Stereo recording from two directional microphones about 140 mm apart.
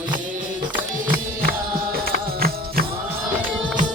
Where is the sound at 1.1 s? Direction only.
90° right.